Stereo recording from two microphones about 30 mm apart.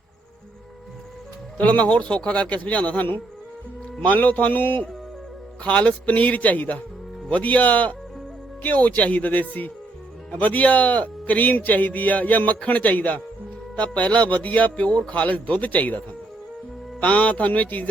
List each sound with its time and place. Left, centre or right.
1.7 s speech: left
4.0 s a man's voice: left
5.6 s speech: left
6.1 s a man's voice: left
13.9 s speech: left
14.3 s a man's voice: left